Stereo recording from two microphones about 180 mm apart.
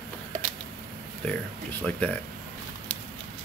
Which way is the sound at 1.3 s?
5° left (ahead or behind).